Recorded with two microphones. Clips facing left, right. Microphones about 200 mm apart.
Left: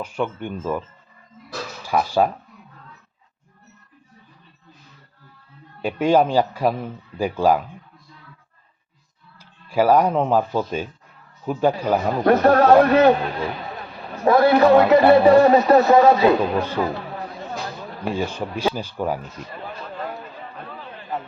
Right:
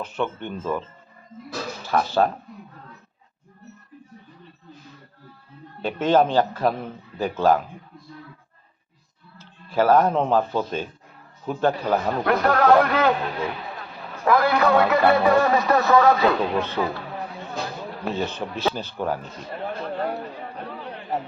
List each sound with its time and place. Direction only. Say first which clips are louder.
0.0 s a man's voice: left 2 dB; 10° left (ahead or behind)
1.8 s speech: left 2 dB; 10° left (ahead or behind)
5.8 s a man's voice: left 2 dB; 10° left (ahead or behind)
9.4 s a man's voice: left 2 dB; 10° left (ahead or behind)
12.3 s a man's voice: left 4 dB; 25° left (ahead or behind)
14.3 s a man's voice: left 5 dB; 25° left (ahead or behind)
16.6 s a man's voice: left 2 dB; 10° left (ahead or behind)
18.0 s a man's voice: left 3 dB; 10° left (ahead or behind)
19.5 s a sound: right 8 dB; 60° right (ahead or behind)
20.7 s a sound: right 3 dB; 15° right (ahead or behind)